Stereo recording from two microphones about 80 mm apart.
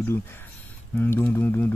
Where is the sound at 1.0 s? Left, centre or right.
Left.